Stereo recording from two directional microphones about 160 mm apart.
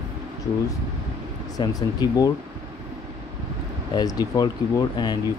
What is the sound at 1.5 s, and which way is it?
Speech, 25° left (ahead or behind).